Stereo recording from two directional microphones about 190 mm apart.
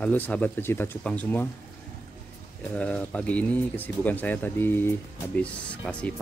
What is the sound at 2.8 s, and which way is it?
Speech, 5° left (ahead or behind).